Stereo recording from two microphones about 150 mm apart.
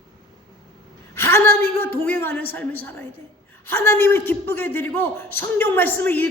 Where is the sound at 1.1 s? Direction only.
15° left (ahead or behind).